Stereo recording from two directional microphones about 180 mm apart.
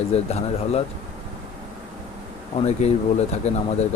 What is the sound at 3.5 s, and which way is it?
Speech, 35° left (ahead or behind).